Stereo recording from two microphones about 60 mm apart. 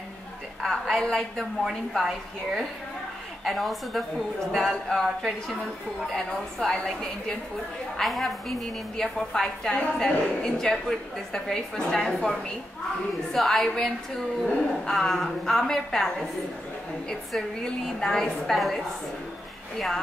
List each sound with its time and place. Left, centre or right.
0.6 s a woman's voice: centre
1.6 s a woman's voice: centre
8.0 s a woman's voice: centre
17.6 s a woman's voice: centre